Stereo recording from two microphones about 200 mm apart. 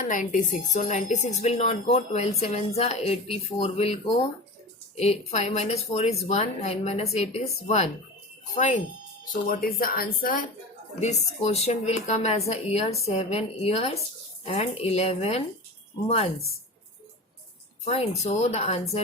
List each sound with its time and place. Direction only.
0.0 s a woman's voice: 40° left (ahead or behind)
9.3 s speech: 45° left (ahead or behind)
11.0 s a woman's voice: 35° left (ahead or behind)
18.2 s a woman's voice: 35° left (ahead or behind)